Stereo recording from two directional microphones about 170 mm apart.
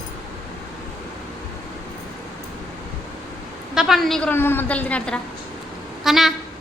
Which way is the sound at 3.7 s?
Centre (ahead or behind).